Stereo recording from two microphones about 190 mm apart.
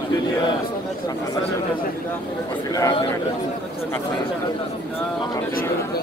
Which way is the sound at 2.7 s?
20° left (ahead or behind).